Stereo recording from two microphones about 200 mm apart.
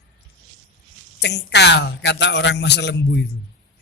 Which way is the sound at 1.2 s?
55° left (ahead or behind).